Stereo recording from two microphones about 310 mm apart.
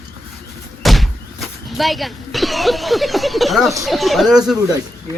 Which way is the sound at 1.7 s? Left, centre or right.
Centre.